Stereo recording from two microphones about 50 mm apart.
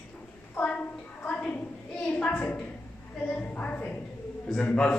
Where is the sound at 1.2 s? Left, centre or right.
Left.